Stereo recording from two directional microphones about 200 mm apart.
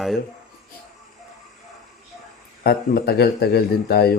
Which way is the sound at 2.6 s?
50° left (ahead or behind).